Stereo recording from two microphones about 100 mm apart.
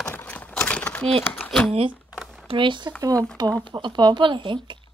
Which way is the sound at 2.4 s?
55° right (ahead or behind).